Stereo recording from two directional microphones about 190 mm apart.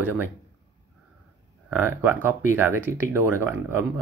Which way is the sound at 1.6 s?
10° right (ahead or behind).